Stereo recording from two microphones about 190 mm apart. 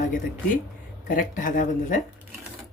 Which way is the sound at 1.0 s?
45° left (ahead or behind).